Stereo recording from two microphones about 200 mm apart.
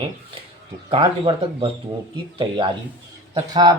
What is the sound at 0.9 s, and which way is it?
Speech, 30° right (ahead or behind).